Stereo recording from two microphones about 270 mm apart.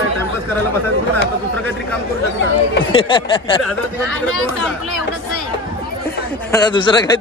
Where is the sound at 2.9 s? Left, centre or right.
Centre.